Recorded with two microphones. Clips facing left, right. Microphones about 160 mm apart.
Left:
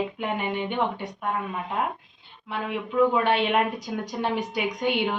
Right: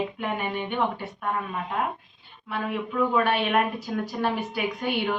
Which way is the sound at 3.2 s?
20° left (ahead or behind).